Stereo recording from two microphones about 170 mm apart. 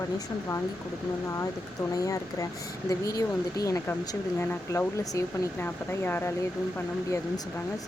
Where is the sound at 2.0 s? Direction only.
20° left (ahead or behind).